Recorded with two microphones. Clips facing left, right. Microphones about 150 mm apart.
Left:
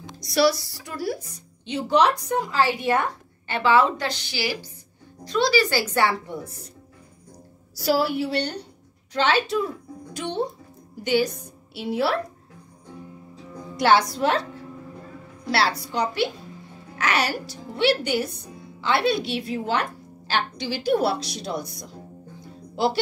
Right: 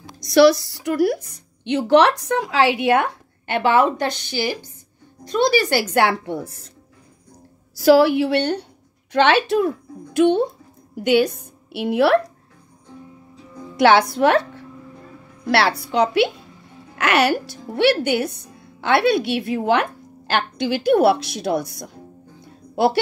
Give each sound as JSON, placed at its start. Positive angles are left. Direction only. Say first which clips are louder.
{"t": 1.6, "sound": "speech", "louder": "right 5 dB", "side_deg": -75}
{"t": 7.8, "sound": "a woman's voice", "louder": "right 9 dB", "side_deg": -85}
{"t": 13.7, "sound": "a woman's voice", "louder": "right 5 dB", "side_deg": -65}
{"t": 15.4, "sound": "a woman's voice", "louder": "right 5 dB", "side_deg": -65}